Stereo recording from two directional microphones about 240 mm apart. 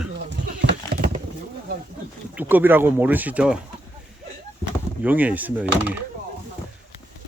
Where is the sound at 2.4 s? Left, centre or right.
Centre.